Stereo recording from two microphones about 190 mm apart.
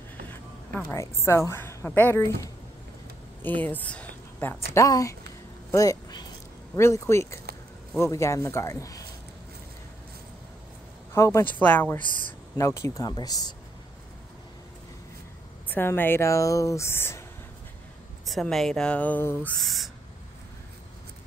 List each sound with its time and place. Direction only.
0.7 s a woman's voice: 10° left (ahead or behind)
11.1 s a woman's voice: 15° left (ahead or behind)
12.0 s speech: 45° right (ahead or behind)
12.5 s speech: 15° left (ahead or behind)
15.7 s a woman's voice: 10° left (ahead or behind)
18.2 s speech: centre (ahead or behind)